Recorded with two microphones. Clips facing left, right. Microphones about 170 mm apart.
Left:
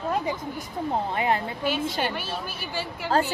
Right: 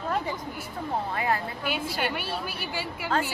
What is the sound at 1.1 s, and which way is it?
Speech, 25° left (ahead or behind).